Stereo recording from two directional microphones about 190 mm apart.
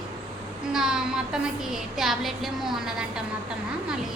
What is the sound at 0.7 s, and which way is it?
A woman's voice, 5° right (ahead or behind).